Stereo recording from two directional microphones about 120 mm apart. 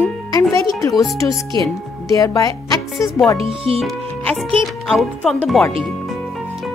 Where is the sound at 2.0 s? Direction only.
30° left (ahead or behind).